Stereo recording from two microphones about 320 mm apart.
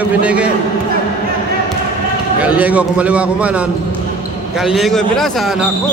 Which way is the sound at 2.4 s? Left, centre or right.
Centre.